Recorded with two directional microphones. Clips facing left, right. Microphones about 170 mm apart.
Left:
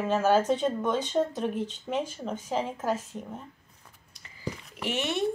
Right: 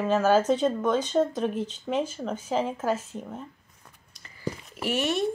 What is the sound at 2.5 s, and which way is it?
Speech, 10° right (ahead or behind).